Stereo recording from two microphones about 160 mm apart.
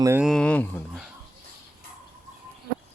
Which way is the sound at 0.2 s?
Centre (ahead or behind).